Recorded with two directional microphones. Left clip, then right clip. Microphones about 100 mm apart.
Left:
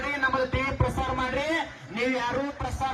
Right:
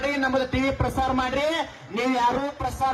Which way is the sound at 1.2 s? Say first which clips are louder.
Right 3 dB; 45° right (ahead or behind).